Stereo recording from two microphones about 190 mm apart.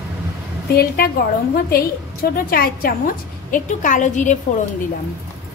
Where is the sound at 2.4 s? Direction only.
50° left (ahead or behind).